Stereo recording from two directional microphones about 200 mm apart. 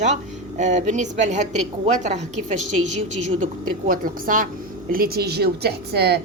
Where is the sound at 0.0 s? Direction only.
35° right (ahead or behind).